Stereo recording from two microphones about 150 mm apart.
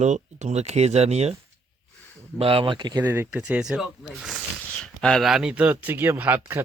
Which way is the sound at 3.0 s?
15° right (ahead or behind).